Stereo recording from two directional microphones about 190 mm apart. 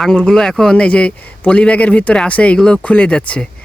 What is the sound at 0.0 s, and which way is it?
A man's voice, 5° left (ahead or behind).